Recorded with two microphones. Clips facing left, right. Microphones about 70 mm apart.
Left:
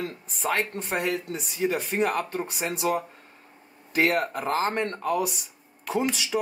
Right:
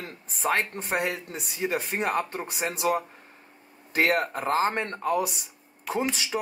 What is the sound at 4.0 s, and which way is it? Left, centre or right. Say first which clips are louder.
Speech: even; right.